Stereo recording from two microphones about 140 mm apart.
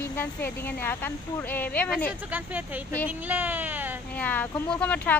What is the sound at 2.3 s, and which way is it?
Speech, 10° right (ahead or behind).